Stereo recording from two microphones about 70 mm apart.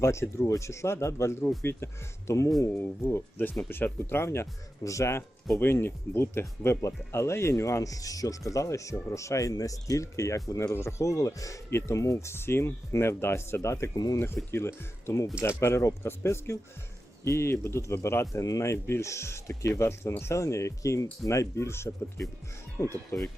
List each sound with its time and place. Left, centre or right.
0.0 s speech: left
4.8 s speech: left
5.5 s speech: left
13.9 s speech: left
14.5 s speech: left
18.4 s speech: left